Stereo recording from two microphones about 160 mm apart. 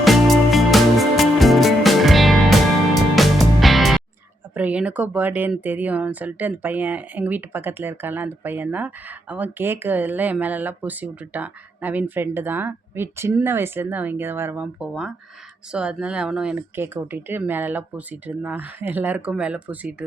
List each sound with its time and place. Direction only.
0.0 s music: centre (ahead or behind)
4.5 s speech: 10° right (ahead or behind)